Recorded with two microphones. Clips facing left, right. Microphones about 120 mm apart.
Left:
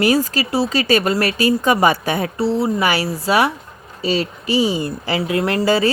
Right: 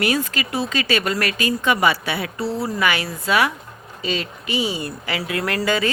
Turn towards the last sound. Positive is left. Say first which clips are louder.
# left 5 dB
turn(degrees=35)  # may be behind; listen again after turning